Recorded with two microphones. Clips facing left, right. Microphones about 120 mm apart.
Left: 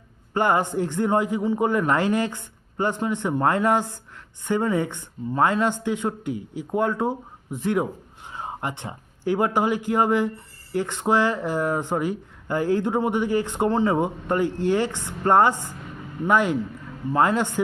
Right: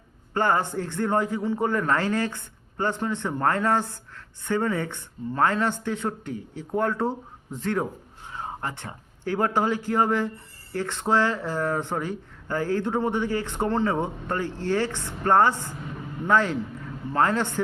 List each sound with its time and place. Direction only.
0.3 s speech: 15° left (ahead or behind)